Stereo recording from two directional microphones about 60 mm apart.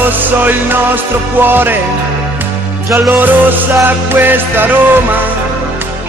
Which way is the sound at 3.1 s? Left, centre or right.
Right.